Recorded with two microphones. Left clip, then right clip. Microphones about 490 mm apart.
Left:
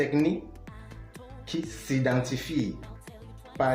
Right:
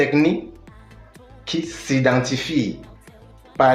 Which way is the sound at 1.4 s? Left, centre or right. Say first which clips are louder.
Right 9 dB; right.